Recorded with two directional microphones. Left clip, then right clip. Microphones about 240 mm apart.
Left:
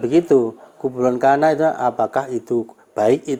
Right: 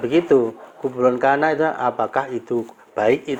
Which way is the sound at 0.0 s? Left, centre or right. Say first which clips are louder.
Left 1 dB; left.